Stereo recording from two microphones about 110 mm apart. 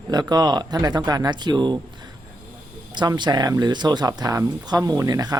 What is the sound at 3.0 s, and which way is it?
Speech, 40° right (ahead or behind).